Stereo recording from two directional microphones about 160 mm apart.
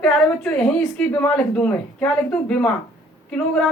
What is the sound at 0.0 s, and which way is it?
A woman's voice, 5° left (ahead or behind).